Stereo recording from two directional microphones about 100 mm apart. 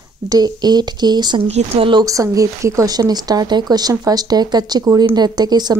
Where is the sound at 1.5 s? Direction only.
75° right (ahead or behind).